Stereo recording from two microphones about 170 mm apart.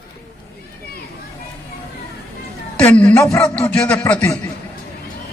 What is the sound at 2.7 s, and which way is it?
A man's voice, 10° left (ahead or behind).